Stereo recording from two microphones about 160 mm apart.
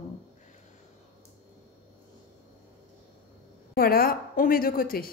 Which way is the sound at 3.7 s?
70° left (ahead or behind).